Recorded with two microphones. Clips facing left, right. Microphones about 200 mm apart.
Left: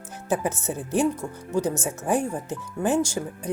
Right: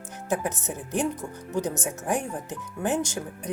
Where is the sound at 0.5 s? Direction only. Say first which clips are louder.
Left 4 dB; 15° right (ahead or behind).